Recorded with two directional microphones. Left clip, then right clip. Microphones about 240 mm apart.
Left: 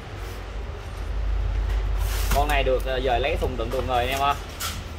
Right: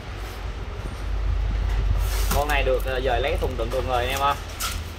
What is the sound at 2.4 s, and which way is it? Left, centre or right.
Speech, left.